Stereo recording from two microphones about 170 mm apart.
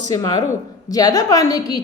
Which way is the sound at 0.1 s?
20° left (ahead or behind).